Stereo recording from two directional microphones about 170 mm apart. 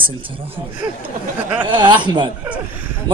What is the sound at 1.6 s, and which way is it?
Speech, 25° right (ahead or behind).